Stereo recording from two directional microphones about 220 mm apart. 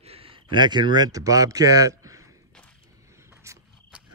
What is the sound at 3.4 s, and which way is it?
Cricket, 15° right (ahead or behind).